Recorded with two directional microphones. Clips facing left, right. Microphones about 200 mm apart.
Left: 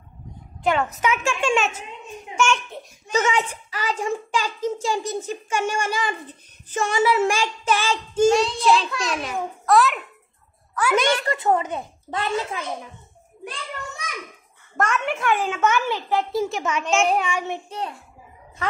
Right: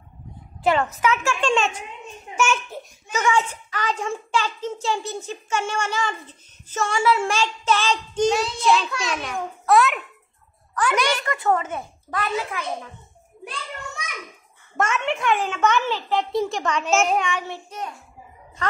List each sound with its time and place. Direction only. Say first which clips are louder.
0.6 s a woman's voice: right 1 dB; centre (ahead or behind)
1.0 s a child's voice: left 1 dB; 15° left (ahead or behind)
2.3 s a child's voice: left 1 dB; 5° right (ahead or behind)
3.1 s a child's voice: left 1 dB; 30° left (ahead or behind)
3.3 s a child's voice: right 2 dB; 10° left (ahead or behind)
10.7 s a sound: left 1 dB; 5° left (ahead or behind)
11.2 s speech: left 1 dB; 20° left (ahead or behind)
14.8 s a child's voice: even; centre (ahead or behind); by 17.7 s 20° left (ahead or behind)